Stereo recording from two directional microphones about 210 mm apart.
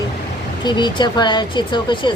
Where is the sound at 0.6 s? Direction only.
20° left (ahead or behind).